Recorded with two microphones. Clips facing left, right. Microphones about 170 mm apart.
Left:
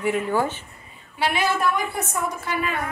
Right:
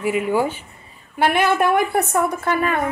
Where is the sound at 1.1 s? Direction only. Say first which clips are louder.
Right 6 dB; 55° right (ahead or behind).